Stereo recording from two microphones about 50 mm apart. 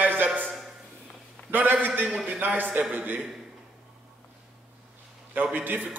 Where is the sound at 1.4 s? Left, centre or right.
Right.